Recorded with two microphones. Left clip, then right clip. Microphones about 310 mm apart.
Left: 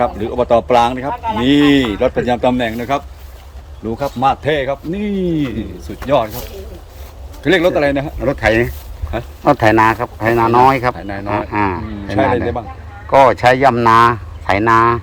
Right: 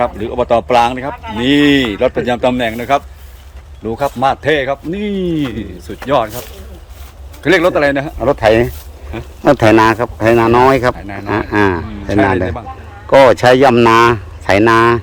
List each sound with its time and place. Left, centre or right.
0.0 s speech: centre
1.1 s speech: centre
1.4 s a man's voice: centre
7.4 s a man's voice: centre
9.4 s speech: right
10.9 s speech: centre
11.3 s speech: right
13.3 s speech: right